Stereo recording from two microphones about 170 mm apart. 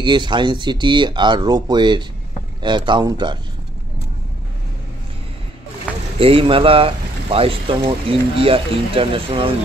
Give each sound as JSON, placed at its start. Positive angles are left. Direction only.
{"t": 0.0, "sound": "speech", "side_deg": -25}
{"t": 6.1, "sound": "speech", "side_deg": -35}